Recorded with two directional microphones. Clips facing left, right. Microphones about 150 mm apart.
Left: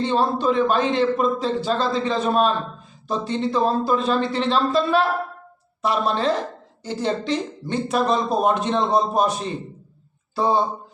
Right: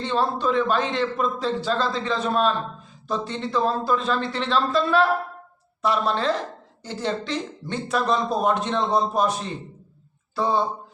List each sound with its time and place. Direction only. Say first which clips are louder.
0.0 s a man's voice: left 3 dB; 15° left (ahead or behind)